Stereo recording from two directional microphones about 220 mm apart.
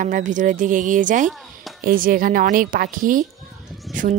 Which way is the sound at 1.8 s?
40° right (ahead or behind).